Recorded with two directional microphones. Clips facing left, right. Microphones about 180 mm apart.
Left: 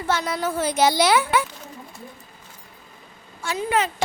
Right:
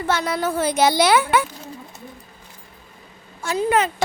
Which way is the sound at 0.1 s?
65° right (ahead or behind).